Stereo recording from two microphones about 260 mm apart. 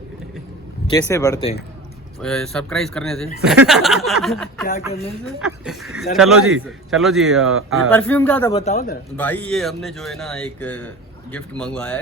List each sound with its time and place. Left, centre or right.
0.9 s speech: centre
2.2 s speech: centre
7.4 s speech: right
7.9 s speech: centre
8.5 s speech: left
9.1 s speech: centre